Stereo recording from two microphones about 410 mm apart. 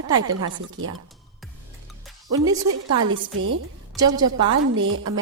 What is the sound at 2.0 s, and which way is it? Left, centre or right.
Music, centre.